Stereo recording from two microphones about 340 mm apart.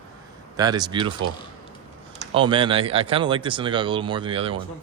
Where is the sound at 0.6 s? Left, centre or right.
Centre.